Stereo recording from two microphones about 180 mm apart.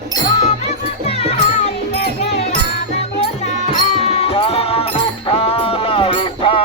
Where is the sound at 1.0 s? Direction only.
35° left (ahead or behind).